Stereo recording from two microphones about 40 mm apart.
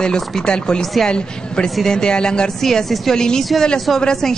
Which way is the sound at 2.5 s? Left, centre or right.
Centre.